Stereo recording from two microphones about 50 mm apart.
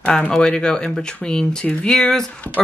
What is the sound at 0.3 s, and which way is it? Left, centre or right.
Speech, centre.